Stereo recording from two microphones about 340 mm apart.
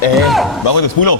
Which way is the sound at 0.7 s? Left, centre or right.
Left.